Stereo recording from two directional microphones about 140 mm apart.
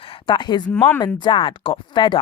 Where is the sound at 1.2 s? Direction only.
35° left (ahead or behind).